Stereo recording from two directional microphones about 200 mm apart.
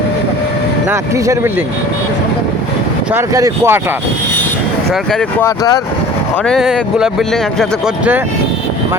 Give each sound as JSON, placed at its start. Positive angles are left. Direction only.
{"t": 0.9, "sound": "speech", "side_deg": -15}
{"t": 3.1, "sound": "speech", "side_deg": -15}
{"t": 5.1, "sound": "speech", "side_deg": 15}
{"t": 6.4, "sound": "speech", "side_deg": 0}